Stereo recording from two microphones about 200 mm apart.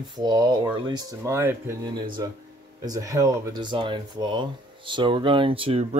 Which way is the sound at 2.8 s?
15° right (ahead or behind).